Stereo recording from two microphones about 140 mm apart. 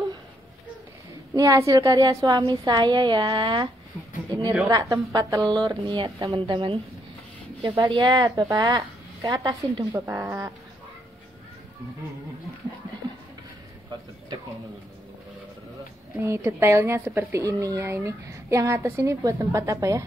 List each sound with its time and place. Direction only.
1.3 s a woman's voice: 20° right (ahead or behind)
10.0 s speech: 15° right (ahead or behind)
16.2 s speech: 20° right (ahead or behind)